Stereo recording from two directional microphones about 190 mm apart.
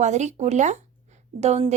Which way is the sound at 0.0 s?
40° right (ahead or behind).